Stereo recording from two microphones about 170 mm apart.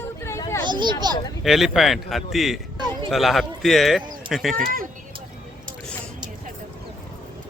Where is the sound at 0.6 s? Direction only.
25° right (ahead or behind).